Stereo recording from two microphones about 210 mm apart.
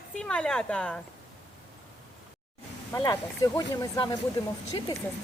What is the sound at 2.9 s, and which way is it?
Speech, 15° left (ahead or behind).